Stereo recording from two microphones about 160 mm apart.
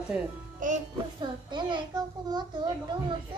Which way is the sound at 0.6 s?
55° right (ahead or behind).